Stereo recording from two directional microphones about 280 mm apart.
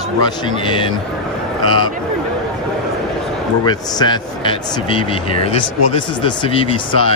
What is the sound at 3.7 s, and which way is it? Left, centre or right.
Speech, centre.